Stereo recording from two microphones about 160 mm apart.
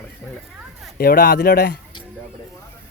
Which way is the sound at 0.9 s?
70° left (ahead or behind).